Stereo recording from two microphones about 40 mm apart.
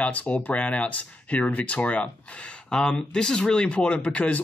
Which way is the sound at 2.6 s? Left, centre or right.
Centre.